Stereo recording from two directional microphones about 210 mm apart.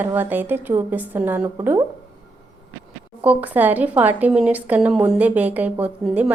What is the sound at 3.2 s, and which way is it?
A woman's voice, 5° right (ahead or behind).